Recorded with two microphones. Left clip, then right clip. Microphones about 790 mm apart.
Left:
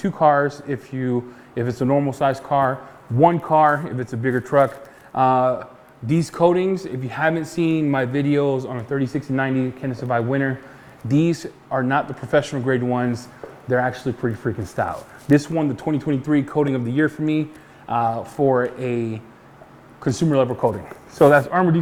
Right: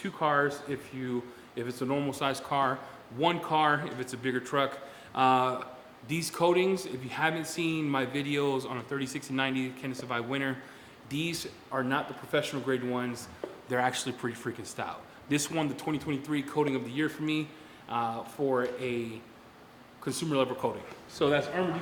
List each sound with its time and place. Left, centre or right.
0.0 s speech: left
11.1 s speech: left
13.7 s speech: left